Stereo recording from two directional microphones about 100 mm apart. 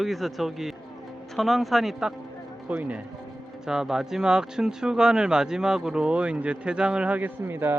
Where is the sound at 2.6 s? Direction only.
15° right (ahead or behind).